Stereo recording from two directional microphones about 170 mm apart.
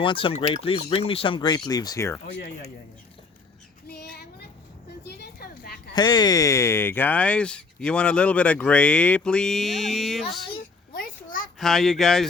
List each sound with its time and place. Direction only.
0.0 s speech: 30° left (ahead or behind)
3.8 s child singing: 70° left (ahead or behind)
5.0 s a sound: 75° left (ahead or behind)
5.9 s speech: 25° left (ahead or behind); by 10.4 s centre (ahead or behind)
10.9 s a sound: 55° left (ahead or behind)
11.6 s speech: centre (ahead or behind)